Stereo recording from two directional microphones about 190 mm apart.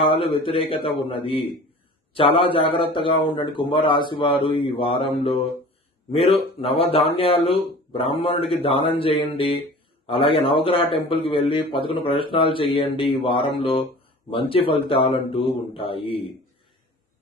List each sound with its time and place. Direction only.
0.0 s a man's voice: 30° left (ahead or behind)